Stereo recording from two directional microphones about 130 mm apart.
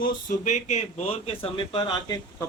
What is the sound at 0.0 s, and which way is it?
Speech, 80° left.